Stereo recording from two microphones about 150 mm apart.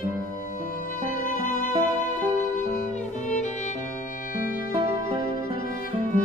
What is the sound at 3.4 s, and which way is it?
Music, 55° left (ahead or behind).